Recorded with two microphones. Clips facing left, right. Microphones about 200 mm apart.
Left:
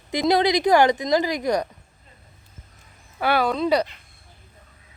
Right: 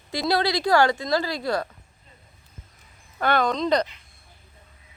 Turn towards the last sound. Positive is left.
turn(degrees=10)  # may be behind; listen again after turning